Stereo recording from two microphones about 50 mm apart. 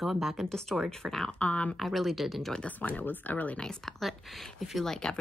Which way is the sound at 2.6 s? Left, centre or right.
Left.